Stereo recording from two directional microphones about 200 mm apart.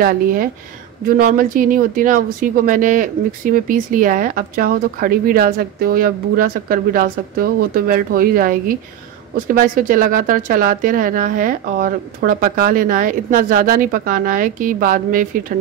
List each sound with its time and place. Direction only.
0.0 s speech: 45° right (ahead or behind)